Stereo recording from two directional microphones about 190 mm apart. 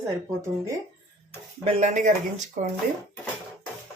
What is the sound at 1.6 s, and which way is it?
Speech, 35° right (ahead or behind).